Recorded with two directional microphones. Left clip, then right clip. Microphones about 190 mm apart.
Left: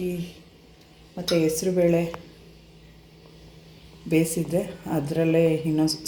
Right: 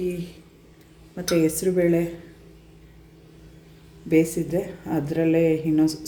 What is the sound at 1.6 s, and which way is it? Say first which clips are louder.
Speech: right 1 dB; 15° right (ahead or behind).